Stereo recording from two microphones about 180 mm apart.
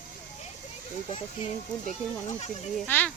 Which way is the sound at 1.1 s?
30° left (ahead or behind).